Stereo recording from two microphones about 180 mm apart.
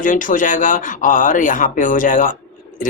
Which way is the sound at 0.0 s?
45° left (ahead or behind).